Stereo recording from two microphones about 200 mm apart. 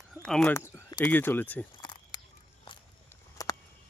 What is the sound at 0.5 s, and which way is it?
Speech, 15° left (ahead or behind).